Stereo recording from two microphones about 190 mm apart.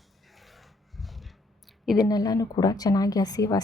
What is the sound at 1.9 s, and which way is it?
Speech, 20° left (ahead or behind).